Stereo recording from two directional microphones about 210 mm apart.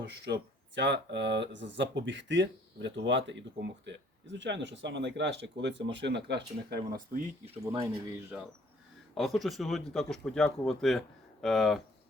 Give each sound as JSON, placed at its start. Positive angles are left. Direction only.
{"t": 0.8, "sound": "speech", "side_deg": -55}
{"t": 7.6, "sound": "speech", "side_deg": -20}
{"t": 9.1, "sound": "speech", "side_deg": 0}